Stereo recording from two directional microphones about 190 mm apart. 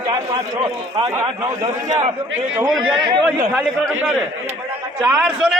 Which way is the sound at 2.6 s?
5° right (ahead or behind).